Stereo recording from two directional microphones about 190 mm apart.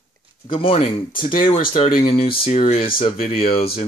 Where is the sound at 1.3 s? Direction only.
45° left (ahead or behind).